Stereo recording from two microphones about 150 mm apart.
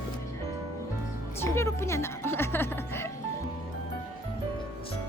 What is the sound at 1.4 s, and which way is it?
Music, 15° left (ahead or behind).